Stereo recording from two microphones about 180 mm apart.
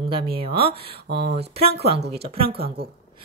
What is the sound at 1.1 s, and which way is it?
Speech, 65° right (ahead or behind).